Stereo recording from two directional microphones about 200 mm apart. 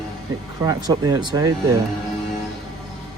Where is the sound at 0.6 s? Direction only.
20° right (ahead or behind).